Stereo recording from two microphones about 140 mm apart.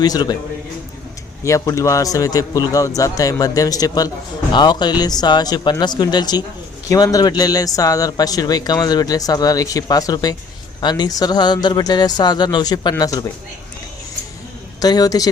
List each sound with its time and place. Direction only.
0.0 s speech: 30° left (ahead or behind)
1.5 s speech: 20° left (ahead or behind)
14.8 s speech: 25° left (ahead or behind)